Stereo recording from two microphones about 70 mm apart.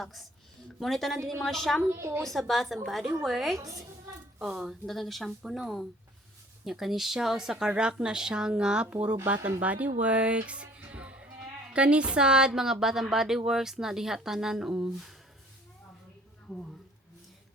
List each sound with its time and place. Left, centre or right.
0.0 s speech: centre
1.9 s a woman's voice: right
2.2 s speech: centre
3.6 s a woman's voice: right
4.4 s a woman's voice: centre